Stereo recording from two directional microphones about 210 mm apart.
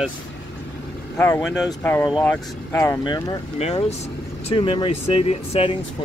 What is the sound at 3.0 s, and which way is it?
Speech, 25° left (ahead or behind).